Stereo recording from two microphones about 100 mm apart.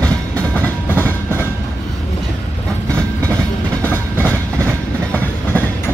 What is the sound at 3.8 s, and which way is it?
Train, 20° left (ahead or behind).